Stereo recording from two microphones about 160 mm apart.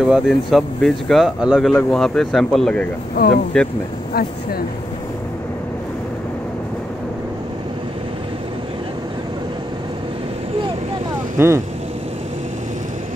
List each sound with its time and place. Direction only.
0.0 s speech: centre (ahead or behind)
3.2 s speech: 80° left
3.5 s speech: 5° left (ahead or behind)
4.1 s speech: 70° left (ahead or behind)
11.3 s speech: 15° right (ahead or behind)